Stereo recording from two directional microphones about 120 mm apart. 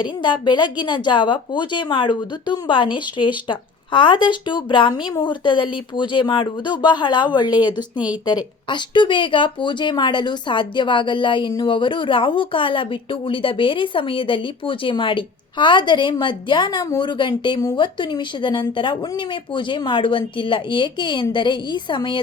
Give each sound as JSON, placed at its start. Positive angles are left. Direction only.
{"t": 0.0, "sound": "a woman's voice", "side_deg": 40}